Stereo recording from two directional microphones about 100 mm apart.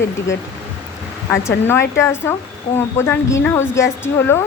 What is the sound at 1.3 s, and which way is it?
A woman's voice, 25° left (ahead or behind).